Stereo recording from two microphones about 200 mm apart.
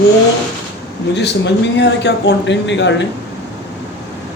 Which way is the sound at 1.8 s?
60° left (ahead or behind).